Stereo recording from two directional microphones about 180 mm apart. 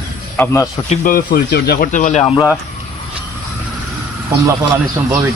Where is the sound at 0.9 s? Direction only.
50° left (ahead or behind).